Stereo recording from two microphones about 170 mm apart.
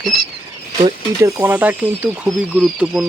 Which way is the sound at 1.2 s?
10° right (ahead or behind).